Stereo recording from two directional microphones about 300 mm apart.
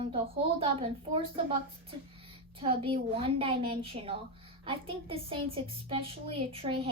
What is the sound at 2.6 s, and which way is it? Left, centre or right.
A woman's voice, centre.